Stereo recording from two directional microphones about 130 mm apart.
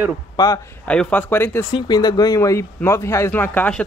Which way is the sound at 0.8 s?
10° left (ahead or behind).